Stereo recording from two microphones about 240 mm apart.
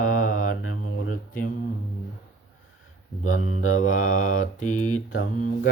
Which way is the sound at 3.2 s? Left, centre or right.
Left.